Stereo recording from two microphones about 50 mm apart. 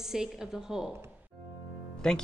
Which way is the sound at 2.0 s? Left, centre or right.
Centre.